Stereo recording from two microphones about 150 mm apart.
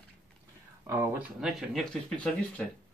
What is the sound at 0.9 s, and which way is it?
Speech, 15° right (ahead or behind).